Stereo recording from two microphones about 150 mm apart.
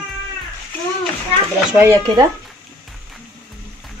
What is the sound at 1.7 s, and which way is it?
Speech, 20° right (ahead or behind).